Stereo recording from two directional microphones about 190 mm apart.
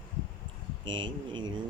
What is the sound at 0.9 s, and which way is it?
Speech, 25° right (ahead or behind).